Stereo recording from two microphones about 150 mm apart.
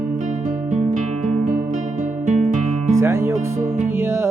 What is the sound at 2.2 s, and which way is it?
Music, 55° right (ahead or behind).